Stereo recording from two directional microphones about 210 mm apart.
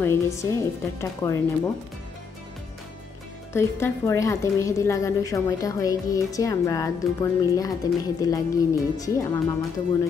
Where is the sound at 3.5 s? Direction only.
10° left (ahead or behind).